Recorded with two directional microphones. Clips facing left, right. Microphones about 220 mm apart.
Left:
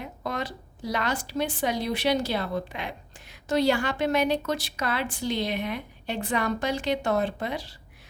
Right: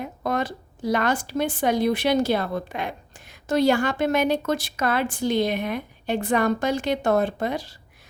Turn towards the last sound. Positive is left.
turn(degrees=-45)  # may be behind; listen again after turning